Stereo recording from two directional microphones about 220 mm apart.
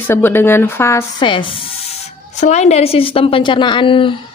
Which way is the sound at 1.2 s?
20° left (ahead or behind).